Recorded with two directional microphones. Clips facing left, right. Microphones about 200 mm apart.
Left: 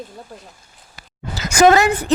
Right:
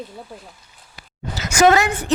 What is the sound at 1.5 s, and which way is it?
Speech, 40° left (ahead or behind).